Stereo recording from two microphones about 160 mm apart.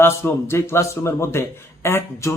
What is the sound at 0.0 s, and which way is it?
Speech, 15° left (ahead or behind).